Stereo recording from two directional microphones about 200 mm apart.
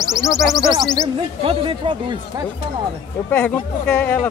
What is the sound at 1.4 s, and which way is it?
Speech, 25° right (ahead or behind).